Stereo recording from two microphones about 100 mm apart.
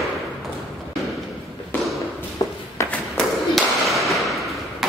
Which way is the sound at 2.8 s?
30° left (ahead or behind).